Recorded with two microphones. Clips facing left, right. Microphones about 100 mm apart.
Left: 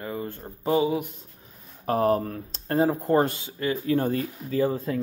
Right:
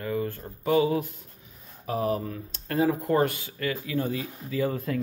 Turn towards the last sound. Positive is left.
turn(degrees=30)  # may be behind; listen again after turning